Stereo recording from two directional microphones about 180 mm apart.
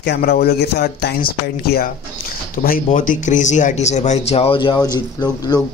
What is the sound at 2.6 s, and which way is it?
Speech, 50° left (ahead or behind).